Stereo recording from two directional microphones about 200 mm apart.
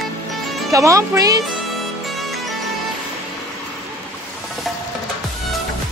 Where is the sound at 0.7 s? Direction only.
15° right (ahead or behind).